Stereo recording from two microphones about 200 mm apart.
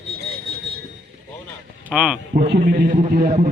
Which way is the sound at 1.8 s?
5° right (ahead or behind).